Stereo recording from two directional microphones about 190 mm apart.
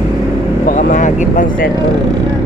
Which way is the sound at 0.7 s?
40° left (ahead or behind).